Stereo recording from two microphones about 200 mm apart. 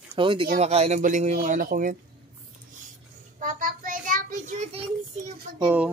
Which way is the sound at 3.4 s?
45° right (ahead or behind).